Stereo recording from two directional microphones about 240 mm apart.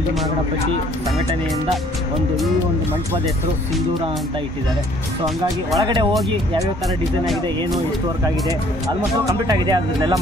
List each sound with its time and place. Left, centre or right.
5.8 s speech: centre
9.2 s speech: centre